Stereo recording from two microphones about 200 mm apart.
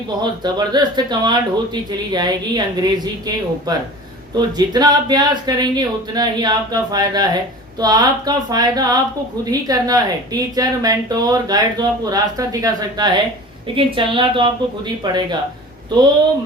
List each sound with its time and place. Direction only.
0.2 s a woman's voice: 20° right (ahead or behind)